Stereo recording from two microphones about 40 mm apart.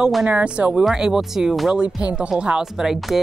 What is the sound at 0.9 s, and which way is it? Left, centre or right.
Speech, centre.